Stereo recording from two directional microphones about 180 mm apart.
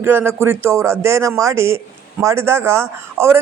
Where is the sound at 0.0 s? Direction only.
15° right (ahead or behind).